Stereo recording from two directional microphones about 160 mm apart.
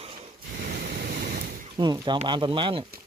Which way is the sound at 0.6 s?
90° right.